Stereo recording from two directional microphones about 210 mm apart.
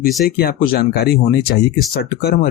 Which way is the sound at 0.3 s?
45° left (ahead or behind).